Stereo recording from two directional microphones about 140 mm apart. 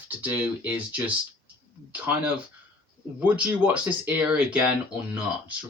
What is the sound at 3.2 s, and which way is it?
Speech, 10° right (ahead or behind).